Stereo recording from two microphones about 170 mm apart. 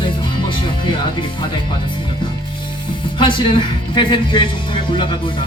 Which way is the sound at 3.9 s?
30° left (ahead or behind).